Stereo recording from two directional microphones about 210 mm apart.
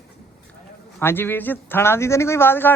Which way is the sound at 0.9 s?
10° left (ahead or behind).